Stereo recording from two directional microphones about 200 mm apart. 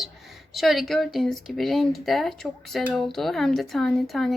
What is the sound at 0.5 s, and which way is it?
Speech, centre (ahead or behind).